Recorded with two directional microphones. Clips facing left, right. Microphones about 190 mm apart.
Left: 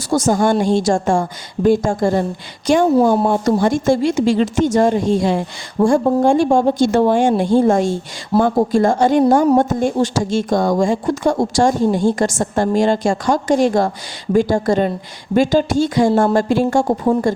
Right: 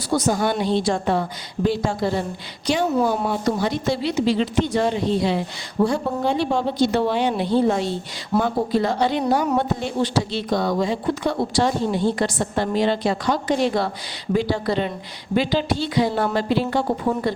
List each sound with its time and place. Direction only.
0.1 s speech: 45° left (ahead or behind)